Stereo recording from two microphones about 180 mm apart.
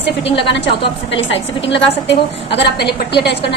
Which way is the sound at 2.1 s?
70° left (ahead or behind).